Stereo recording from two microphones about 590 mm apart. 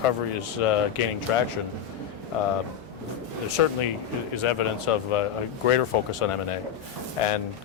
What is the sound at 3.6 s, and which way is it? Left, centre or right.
Speech, left.